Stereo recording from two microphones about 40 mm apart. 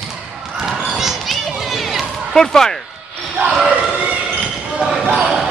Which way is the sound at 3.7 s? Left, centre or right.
Right.